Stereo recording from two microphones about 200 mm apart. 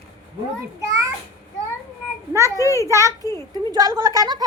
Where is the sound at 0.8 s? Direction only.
15° right (ahead or behind).